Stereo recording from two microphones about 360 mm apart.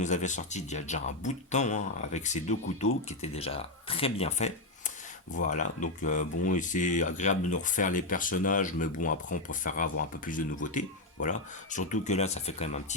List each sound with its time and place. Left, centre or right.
0.0 s speech: centre